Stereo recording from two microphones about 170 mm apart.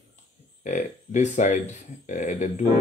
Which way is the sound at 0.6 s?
45° left (ahead or behind).